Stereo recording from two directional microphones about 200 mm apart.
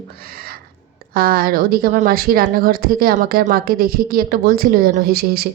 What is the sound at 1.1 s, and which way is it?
A woman's voice, 45° right (ahead or behind).